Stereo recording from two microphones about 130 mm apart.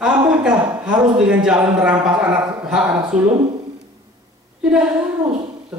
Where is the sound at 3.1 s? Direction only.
70° right (ahead or behind).